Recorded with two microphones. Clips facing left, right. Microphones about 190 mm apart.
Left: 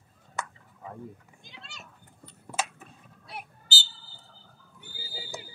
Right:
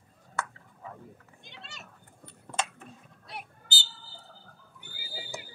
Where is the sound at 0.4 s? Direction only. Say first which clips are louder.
Right 1 dB; 20° left (ahead or behind).